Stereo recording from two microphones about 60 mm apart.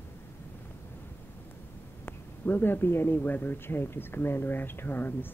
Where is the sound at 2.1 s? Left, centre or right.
Left.